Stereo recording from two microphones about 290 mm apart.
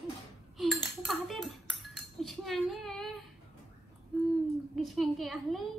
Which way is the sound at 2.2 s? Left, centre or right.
Centre.